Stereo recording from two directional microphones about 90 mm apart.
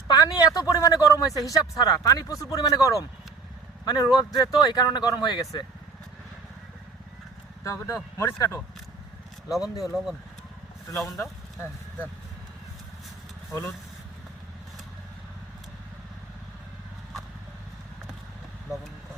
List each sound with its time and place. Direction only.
0.1 s speech: 45° left (ahead or behind)
7.6 s speech: 35° left (ahead or behind)
9.5 s speech: 5° right (ahead or behind)
13.5 s speech: 30° left (ahead or behind)